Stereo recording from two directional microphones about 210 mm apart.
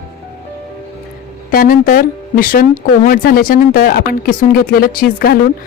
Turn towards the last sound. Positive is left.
turn(degrees=45)  # may be behind; listen again after turning